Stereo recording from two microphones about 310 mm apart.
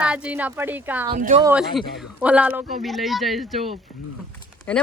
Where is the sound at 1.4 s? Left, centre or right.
Centre.